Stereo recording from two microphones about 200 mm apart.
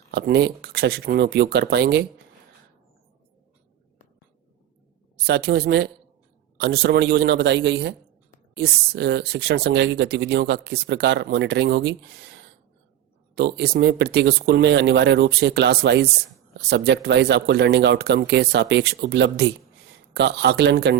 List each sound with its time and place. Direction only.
0.1 s speech: 55° right (ahead or behind)
5.2 s speech: 55° right (ahead or behind)
13.3 s speech: 55° right (ahead or behind)